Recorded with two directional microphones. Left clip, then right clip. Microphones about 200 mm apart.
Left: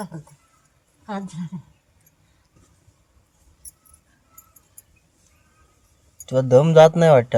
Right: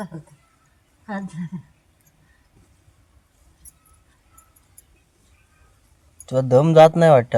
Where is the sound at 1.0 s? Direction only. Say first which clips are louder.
Even; 50° left (ahead or behind).